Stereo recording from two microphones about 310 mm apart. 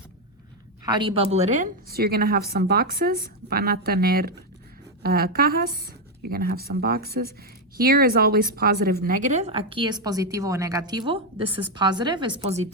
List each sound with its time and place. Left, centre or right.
0.9 s speech: centre